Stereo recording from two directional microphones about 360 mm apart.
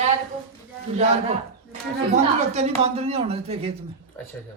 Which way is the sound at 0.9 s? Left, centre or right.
Centre.